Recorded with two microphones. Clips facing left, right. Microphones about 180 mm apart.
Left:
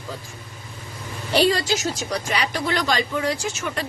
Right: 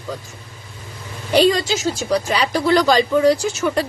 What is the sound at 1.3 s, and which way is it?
Speech, 20° right (ahead or behind).